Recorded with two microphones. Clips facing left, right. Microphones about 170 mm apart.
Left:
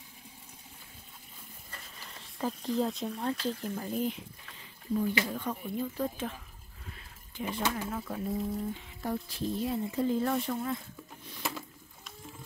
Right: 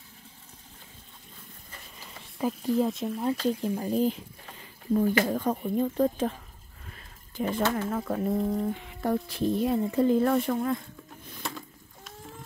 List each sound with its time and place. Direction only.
2.3 s speech: 5° right (ahead or behind)
3.4 s speech: 15° right (ahead or behind)
3.7 s speech: 35° right (ahead or behind)
5.0 s speech: 50° right (ahead or behind)
6.9 s a sound: 45° right (ahead or behind)
7.9 s speech: 65° right (ahead or behind)
11.4 s a sound: 5° left (ahead or behind)